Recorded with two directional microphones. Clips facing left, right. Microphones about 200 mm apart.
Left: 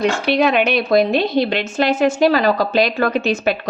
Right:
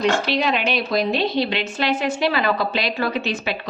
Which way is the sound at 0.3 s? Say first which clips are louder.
Left 6 dB; 55° left (ahead or behind).